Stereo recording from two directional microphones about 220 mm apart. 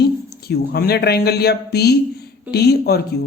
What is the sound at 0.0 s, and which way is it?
Speech, 45° left (ahead or behind).